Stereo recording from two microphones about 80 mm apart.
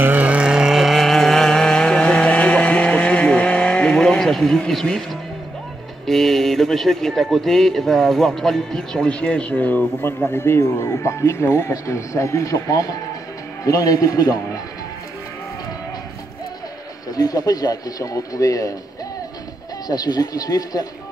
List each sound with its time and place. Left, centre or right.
0.0 s vehicle: right; by 5.2 s centre
6.0 s speech: centre; by 14.4 s left
17.1 s speech: left
19.9 s speech: left